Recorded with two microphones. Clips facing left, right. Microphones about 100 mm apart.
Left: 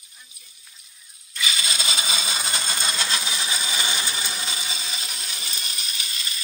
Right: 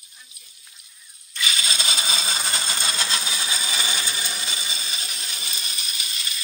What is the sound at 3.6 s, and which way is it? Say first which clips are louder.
Ratchet: left 1 dB; 15° left (ahead or behind).